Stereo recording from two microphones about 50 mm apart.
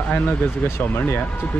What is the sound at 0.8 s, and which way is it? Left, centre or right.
Speech, left.